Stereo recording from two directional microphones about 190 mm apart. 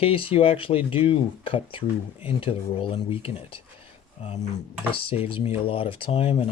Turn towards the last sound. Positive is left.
turn(degrees=30)  # may be behind; listen again after turning